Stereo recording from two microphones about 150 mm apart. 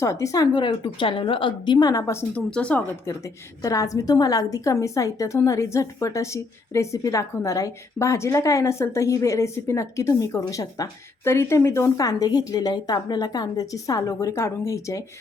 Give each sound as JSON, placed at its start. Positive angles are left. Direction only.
{"t": 0.0, "sound": "a woman's voice", "side_deg": 20}
{"t": 2.3, "sound": "speech", "side_deg": 5}
{"t": 3.6, "sound": "a woman's voice", "side_deg": 25}